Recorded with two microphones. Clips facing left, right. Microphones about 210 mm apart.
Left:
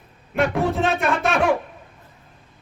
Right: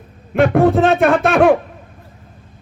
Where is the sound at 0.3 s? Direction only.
60° right (ahead or behind).